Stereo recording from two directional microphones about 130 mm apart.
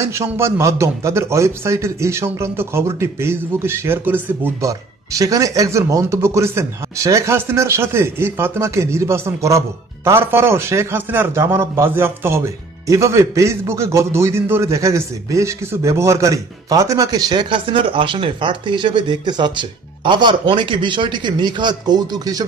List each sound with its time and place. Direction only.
0.0 s a man's voice: 20° right (ahead or behind)